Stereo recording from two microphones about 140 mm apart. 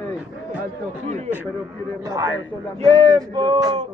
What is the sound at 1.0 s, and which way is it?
Speech, 55° right (ahead or behind).